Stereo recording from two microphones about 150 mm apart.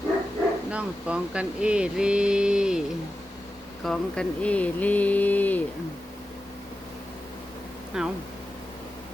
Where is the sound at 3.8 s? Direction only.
5° left (ahead or behind).